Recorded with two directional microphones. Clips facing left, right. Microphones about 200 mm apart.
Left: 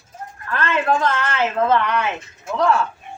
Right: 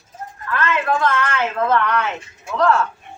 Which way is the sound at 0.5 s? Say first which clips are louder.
Left 1 dB; 30° left (ahead or behind).